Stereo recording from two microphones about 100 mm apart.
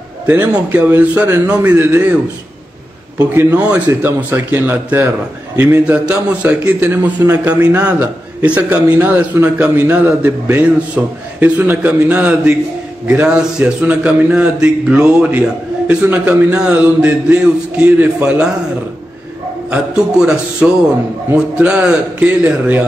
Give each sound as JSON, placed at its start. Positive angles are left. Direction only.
{"t": 0.3, "sound": "a man's voice", "side_deg": -15}
{"t": 3.3, "sound": "a man's voice", "side_deg": -20}
{"t": 19.7, "sound": "a man's voice", "side_deg": -5}